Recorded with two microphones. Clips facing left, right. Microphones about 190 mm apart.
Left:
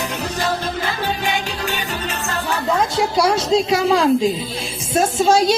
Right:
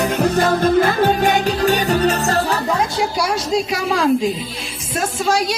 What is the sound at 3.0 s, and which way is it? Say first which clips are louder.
A woman's voice: left 3 dB; 25° left (ahead or behind).